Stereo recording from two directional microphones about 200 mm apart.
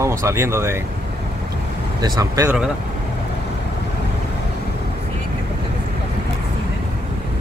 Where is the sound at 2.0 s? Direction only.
20° right (ahead or behind).